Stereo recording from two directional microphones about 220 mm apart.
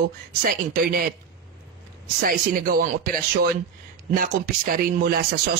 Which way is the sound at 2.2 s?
40° right (ahead or behind).